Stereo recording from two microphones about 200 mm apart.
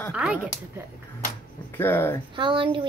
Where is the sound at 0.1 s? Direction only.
5° right (ahead or behind).